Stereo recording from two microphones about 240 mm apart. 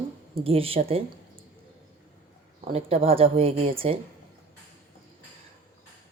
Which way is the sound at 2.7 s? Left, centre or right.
Right.